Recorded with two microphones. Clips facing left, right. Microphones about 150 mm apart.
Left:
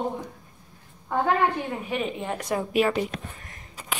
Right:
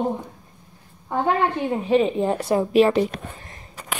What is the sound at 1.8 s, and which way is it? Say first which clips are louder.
Speech: right 10 dB; 30° right (ahead or behind).